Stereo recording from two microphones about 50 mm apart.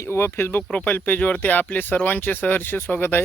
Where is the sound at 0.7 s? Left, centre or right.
Left.